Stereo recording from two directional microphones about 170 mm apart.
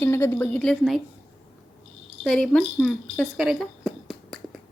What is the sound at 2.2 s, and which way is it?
Speech, 5° left (ahead or behind).